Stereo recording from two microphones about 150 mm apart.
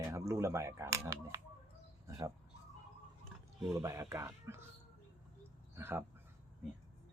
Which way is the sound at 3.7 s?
20° right (ahead or behind).